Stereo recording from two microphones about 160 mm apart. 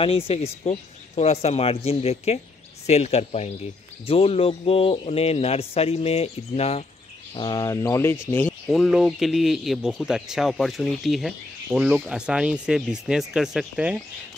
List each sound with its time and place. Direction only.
0.0 s a man's voice: 35° left (ahead or behind)
7.3 s speech: 25° left (ahead or behind)
8.6 s speech: centre (ahead or behind)